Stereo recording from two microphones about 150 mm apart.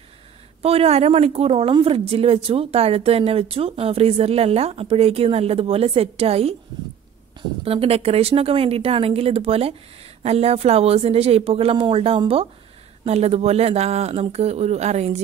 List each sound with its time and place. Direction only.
0.6 s a woman's voice: 40° right (ahead or behind)
7.6 s a woman's voice: 40° right (ahead or behind)